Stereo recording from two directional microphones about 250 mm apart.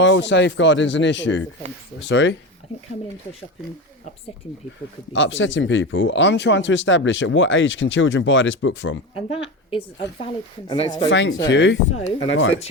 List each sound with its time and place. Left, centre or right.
0.0 s speech: left
5.1 s speech: left
9.1 s speech: left
11.1 s speech: left
11.9 s speech: left
12.3 s speech: left